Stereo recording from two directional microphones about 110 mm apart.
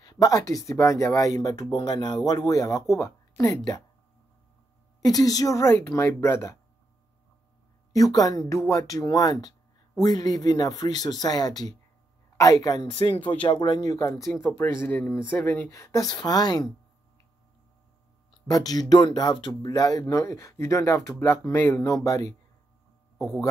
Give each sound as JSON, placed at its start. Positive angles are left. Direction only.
{"t": 0.0, "sound": "speech", "side_deg": 35}
{"t": 5.0, "sound": "speech", "side_deg": 35}
{"t": 7.9, "sound": "speech", "side_deg": 35}
{"t": 13.3, "sound": "speech", "side_deg": 50}
{"t": 14.4, "sound": "speech", "side_deg": 15}
{"t": 15.7, "sound": "speech", "side_deg": 30}
{"t": 18.5, "sound": "speech", "side_deg": 35}
{"t": 21.8, "sound": "speech", "side_deg": 30}
{"t": 23.1, "sound": "speech", "side_deg": 0}